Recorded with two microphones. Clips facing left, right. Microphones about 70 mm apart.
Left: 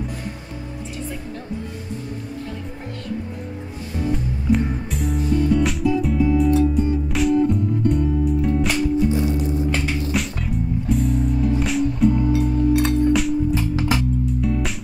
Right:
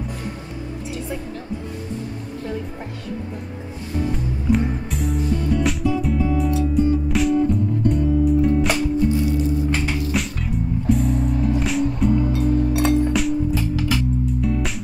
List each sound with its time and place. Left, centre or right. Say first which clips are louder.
3.9 s music: even; centre
9.1 s music: right 1 dB; left
10.1 s music: even; centre
13.6 s music: left 1 dB; left
14.4 s music: even; centre